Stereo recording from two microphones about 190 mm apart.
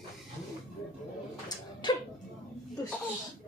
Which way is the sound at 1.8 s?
25° left (ahead or behind).